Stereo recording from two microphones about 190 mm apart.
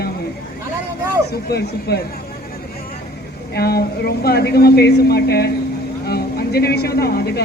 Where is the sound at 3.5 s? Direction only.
55° left (ahead or behind).